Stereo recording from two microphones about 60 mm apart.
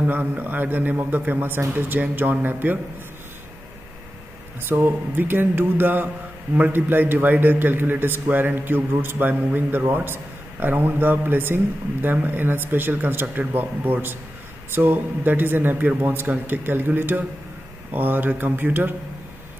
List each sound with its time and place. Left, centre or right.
0.0 s a man's voice: right
4.6 s a man's voice: right